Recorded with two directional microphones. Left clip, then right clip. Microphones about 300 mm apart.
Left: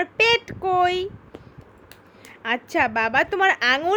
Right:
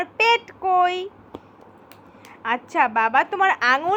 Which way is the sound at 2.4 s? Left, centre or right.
Left.